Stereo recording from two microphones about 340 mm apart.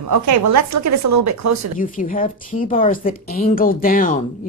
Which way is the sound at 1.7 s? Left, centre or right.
Left.